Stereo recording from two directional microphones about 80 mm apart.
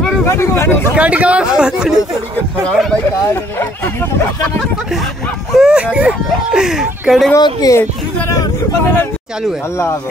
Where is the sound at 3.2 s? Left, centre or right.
Left.